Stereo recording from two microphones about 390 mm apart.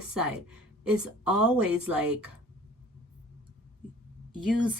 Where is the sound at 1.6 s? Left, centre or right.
Right.